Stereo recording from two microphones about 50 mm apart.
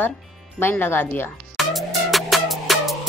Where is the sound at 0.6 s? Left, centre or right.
Left.